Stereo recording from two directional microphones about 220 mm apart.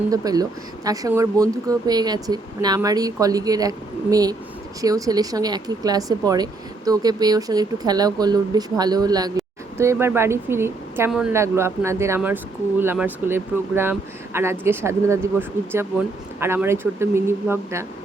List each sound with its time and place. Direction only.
0.1 s speech: 15° right (ahead or behind)